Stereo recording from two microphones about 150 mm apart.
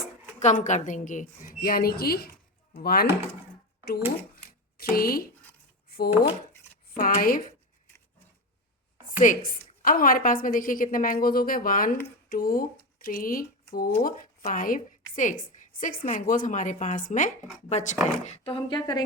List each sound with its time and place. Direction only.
0.0 s a woman's voice: 55° left (ahead or behind); by 3.1 s 90° left
4.8 s speech: 80° left
5.9 s a sound: 90° left
6.8 s speech: 70° left (ahead or behind)
9.1 s a woman's voice: 60° left (ahead or behind); by 13.9 s 80° left
14.0 s a woman's voice: 65° left (ahead or behind)
17.7 s speech: 50° left (ahead or behind); by 19.0 s 25° left (ahead or behind)